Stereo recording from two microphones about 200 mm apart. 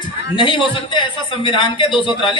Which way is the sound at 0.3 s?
25° left (ahead or behind).